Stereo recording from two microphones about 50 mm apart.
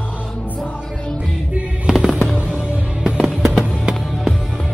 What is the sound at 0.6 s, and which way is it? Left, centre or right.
Music, left.